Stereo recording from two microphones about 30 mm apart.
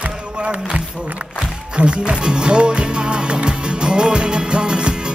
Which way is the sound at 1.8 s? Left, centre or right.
Right.